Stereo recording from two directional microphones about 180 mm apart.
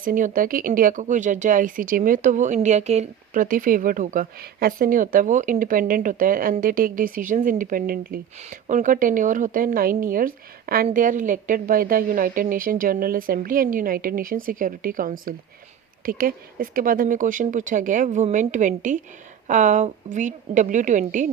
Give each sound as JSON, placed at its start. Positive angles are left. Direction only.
{"t": 0.0, "sound": "speech", "side_deg": -50}
{"t": 8.4, "sound": "speech", "side_deg": -40}